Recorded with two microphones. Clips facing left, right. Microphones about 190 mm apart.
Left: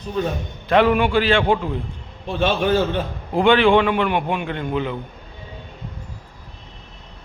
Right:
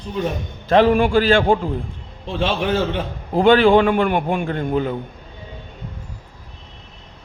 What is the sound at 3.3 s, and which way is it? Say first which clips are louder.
A man's voice: right 2 dB; 40° right (ahead or behind).